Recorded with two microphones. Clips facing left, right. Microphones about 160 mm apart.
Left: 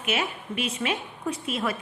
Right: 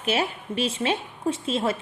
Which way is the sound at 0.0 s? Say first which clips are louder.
Right 3 dB; 30° right (ahead or behind).